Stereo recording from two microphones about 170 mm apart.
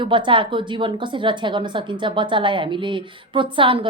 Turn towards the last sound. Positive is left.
turn(degrees=-30)  # may be behind; listen again after turning